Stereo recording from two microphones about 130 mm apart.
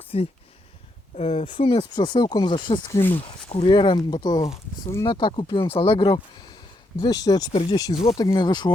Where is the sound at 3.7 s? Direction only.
40° left (ahead or behind).